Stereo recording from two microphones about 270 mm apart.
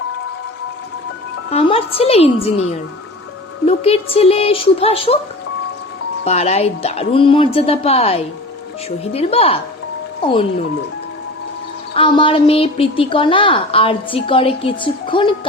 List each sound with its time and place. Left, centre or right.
1.5 s a woman's voice: left
3.7 s a woman's voice: left
6.2 s a woman's voice: left
11.9 s a woman's voice: centre